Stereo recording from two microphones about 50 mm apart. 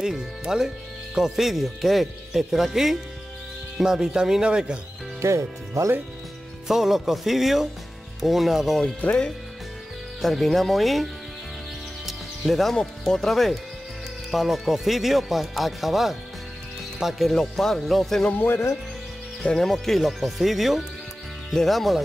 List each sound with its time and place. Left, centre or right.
0.0 s speech: centre
5.2 s speech: right
6.7 s speech: centre
10.2 s speech: centre
12.1 s music: centre
12.7 s speech: centre
17.3 s speech: centre
18.3 s speech: left
19.6 s speech: centre